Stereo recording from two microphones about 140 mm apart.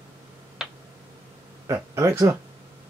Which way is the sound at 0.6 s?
5° right (ahead or behind).